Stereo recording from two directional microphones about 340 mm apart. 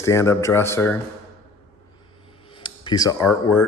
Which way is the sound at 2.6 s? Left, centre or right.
Centre.